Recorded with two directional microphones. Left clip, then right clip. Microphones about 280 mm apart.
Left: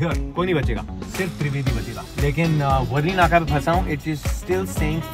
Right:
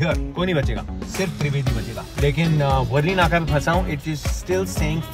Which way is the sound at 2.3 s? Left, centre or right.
Centre.